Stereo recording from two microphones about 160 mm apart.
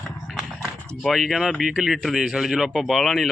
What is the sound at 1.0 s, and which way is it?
Speech, centre (ahead or behind).